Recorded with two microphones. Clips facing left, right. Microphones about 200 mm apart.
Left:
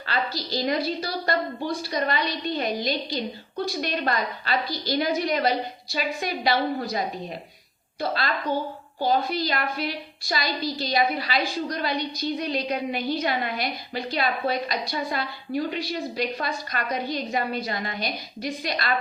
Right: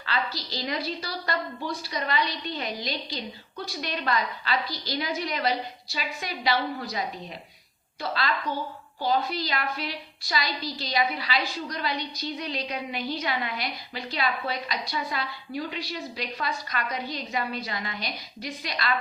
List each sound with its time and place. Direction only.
0.0 s a sound: 50° left (ahead or behind)
0.9 s a woman's voice: 50° left (ahead or behind)
8.0 s a woman's voice: 50° left (ahead or behind)